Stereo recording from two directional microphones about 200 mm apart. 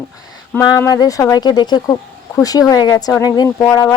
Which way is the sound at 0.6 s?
20° left (ahead or behind).